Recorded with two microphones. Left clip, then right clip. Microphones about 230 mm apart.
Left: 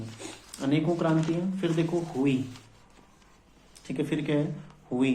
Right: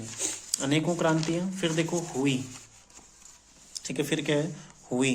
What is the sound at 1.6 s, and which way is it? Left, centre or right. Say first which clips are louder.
Speech: even; right.